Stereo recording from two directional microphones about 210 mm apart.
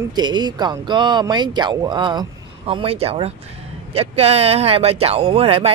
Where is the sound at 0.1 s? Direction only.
20° right (ahead or behind).